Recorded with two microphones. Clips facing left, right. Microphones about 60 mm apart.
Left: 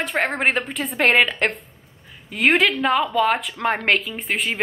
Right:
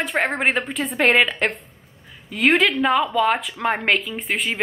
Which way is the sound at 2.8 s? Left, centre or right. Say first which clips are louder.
Even; centre.